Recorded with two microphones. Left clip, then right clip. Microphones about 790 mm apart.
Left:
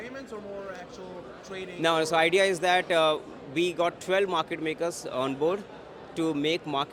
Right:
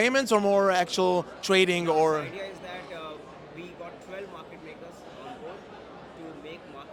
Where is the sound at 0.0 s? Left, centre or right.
Right.